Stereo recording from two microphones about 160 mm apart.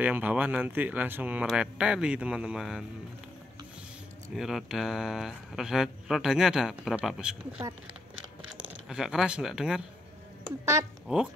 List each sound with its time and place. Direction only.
0.0 s speech: 10° right (ahead or behind)
4.4 s speech: 5° right (ahead or behind)
10.6 s speech: 15° right (ahead or behind)